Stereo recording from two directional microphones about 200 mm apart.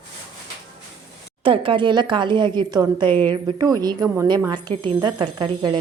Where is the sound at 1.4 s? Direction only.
25° right (ahead or behind).